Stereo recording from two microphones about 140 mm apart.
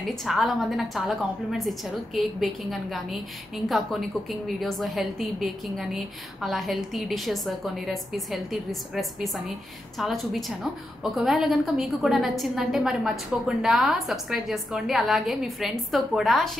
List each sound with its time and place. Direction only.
0.0 s a woman's voice: centre (ahead or behind)